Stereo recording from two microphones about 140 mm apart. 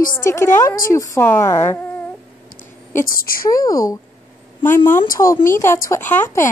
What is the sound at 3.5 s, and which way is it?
Speech, 25° left (ahead or behind).